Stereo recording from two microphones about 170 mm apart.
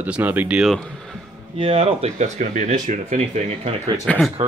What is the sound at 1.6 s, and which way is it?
Speech, 35° right (ahead or behind).